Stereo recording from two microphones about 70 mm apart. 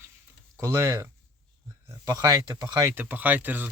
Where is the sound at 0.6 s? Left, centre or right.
Right.